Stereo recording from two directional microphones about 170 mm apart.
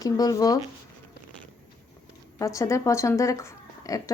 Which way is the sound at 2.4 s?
20° left (ahead or behind).